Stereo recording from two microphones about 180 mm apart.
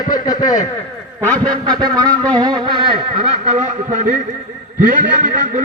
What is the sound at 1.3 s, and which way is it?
Speech, 20° right (ahead or behind).